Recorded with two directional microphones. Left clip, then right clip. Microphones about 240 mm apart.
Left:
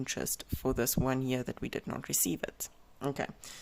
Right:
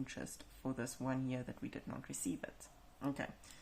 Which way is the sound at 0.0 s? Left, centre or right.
Left.